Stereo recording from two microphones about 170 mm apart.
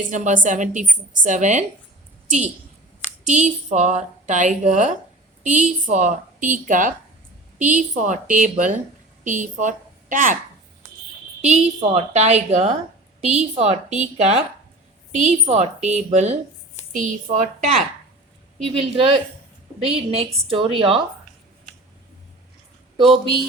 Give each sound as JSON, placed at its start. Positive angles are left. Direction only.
{"t": 0.0, "sound": "a woman's voice", "side_deg": -50}
{"t": 3.2, "sound": "a woman's voice", "side_deg": -45}
{"t": 11.4, "sound": "a woman's voice", "side_deg": -40}
{"t": 18.8, "sound": "a woman's voice", "side_deg": -35}